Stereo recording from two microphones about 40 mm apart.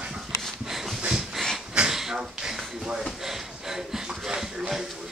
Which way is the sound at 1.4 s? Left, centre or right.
Centre.